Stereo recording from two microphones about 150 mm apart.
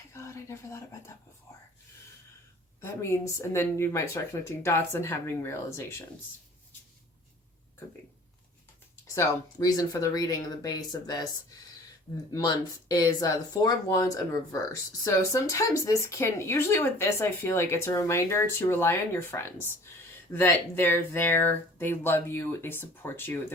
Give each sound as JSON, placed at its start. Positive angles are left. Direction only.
{"t": 0.1, "sound": "speech", "side_deg": 20}
{"t": 2.8, "sound": "speech", "side_deg": 20}
{"t": 9.1, "sound": "speech", "side_deg": 25}